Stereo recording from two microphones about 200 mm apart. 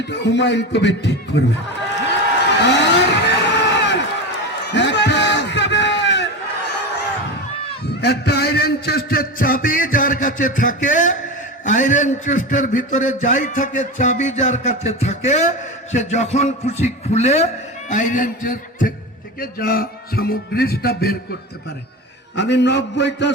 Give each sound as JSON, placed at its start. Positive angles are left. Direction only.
{"t": 0.0, "sound": "a man's voice", "side_deg": 60}
{"t": 2.6, "sound": "vehicle", "side_deg": 60}
{"t": 4.6, "sound": "a sound", "side_deg": 60}
{"t": 8.0, "sound": "a sound", "side_deg": 55}
{"t": 11.6, "sound": "a man's voice", "side_deg": 40}
{"t": 22.4, "sound": "a man's voice", "side_deg": 60}